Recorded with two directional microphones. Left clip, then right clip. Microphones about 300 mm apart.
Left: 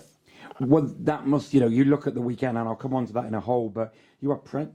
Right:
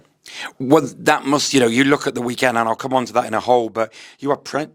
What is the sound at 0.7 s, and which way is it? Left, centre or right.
Speech, centre.